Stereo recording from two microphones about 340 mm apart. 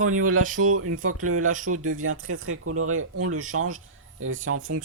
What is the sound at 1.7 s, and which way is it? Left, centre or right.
Speech, right.